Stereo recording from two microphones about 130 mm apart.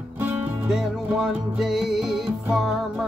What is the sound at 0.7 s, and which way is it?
Music, centre (ahead or behind).